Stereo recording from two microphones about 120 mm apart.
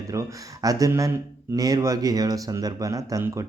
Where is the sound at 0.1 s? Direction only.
30° right (ahead or behind).